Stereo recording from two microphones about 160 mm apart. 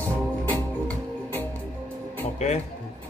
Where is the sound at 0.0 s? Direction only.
10° left (ahead or behind).